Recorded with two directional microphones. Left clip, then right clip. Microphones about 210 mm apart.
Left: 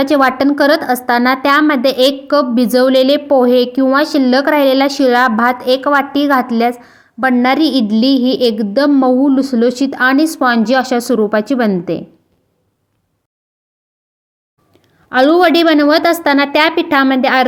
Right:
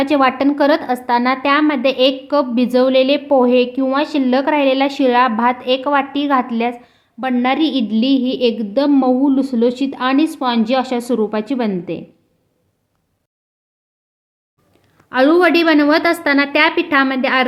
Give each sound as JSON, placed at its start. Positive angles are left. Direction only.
{"t": 0.0, "sound": "a woman's voice", "side_deg": 15}
{"t": 14.7, "sound": "a woman's voice", "side_deg": 15}